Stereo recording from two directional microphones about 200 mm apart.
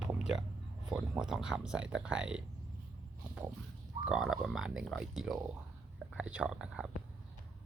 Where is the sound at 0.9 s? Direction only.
5° right (ahead or behind).